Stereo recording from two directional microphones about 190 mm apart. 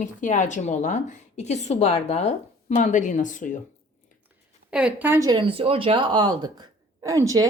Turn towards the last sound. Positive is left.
turn(degrees=-15)  # may be behind; listen again after turning